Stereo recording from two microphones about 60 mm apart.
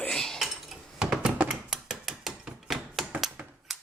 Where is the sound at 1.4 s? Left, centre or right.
Centre.